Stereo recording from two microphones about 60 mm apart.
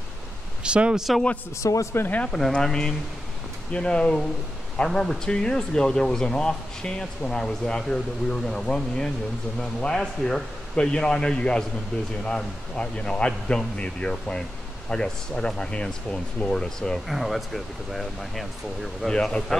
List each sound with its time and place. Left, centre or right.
0.7 s speech: centre
1.6 s speech: left
2.3 s speech: centre
17.1 s speech: centre
19.0 s speech: centre